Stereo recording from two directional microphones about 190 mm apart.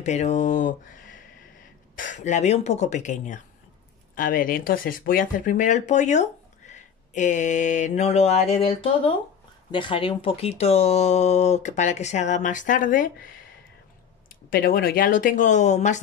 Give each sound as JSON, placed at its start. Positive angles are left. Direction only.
{"t": 0.0, "sound": "speech", "side_deg": 35}
{"t": 14.3, "sound": "speech", "side_deg": 50}